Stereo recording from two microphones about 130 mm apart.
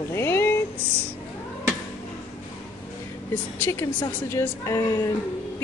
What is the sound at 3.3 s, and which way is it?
A woman's voice, 15° left (ahead or behind).